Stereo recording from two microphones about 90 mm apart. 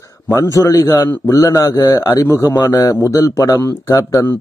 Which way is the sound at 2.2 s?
30° left (ahead or behind).